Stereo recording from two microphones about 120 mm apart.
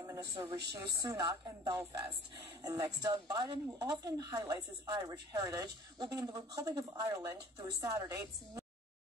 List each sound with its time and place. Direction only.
0.2 s a woman's voice: 40° right (ahead or behind)